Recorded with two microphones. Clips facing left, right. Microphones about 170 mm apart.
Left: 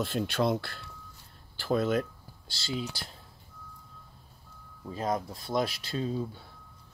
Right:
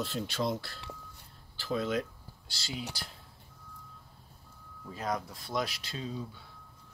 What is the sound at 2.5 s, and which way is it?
Speech, 25° left (ahead or behind).